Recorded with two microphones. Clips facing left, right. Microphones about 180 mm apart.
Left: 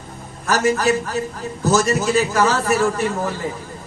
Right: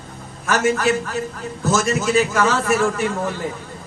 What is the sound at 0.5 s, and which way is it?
A man's voice, 35° left (ahead or behind).